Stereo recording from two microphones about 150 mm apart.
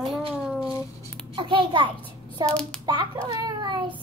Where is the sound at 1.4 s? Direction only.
35° right (ahead or behind).